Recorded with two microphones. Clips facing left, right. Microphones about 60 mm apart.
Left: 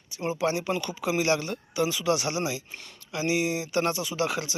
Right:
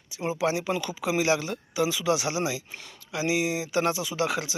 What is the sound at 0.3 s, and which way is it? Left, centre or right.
Speech, right.